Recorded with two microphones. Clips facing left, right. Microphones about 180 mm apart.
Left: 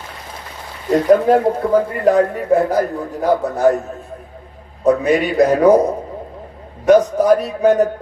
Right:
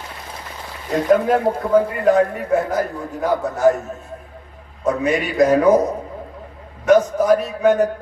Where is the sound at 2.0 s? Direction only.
35° left (ahead or behind).